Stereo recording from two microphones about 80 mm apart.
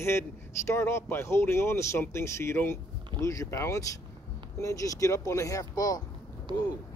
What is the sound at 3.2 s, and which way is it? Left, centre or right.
Speech, left.